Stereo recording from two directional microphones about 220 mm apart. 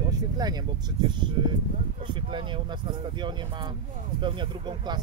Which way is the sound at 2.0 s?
20° right (ahead or behind).